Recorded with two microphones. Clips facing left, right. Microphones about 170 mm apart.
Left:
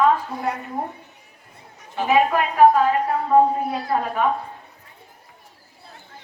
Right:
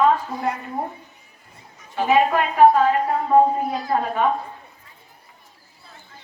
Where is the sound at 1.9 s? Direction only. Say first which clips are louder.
Right 1 dB; centre (ahead or behind).